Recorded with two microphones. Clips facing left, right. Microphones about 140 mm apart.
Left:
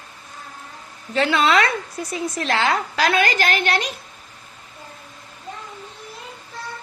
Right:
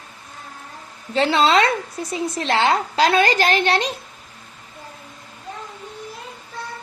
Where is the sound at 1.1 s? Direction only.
30° right (ahead or behind).